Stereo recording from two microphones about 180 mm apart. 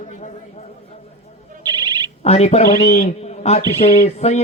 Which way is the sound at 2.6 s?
55° left (ahead or behind).